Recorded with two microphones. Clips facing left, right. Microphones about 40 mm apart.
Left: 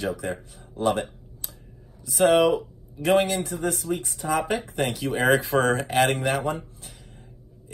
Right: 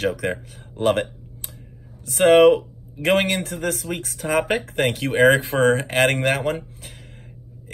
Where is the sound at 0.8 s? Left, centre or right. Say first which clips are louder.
Right 4 dB; right.